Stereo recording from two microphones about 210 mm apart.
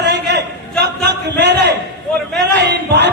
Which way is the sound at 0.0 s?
50° right (ahead or behind).